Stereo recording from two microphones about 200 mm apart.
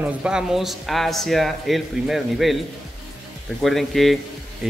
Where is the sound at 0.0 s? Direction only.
5° right (ahead or behind).